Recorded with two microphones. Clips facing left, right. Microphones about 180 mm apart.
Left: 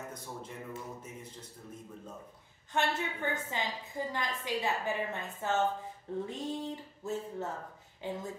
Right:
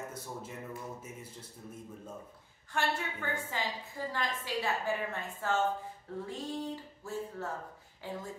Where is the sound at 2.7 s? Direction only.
20° left (ahead or behind).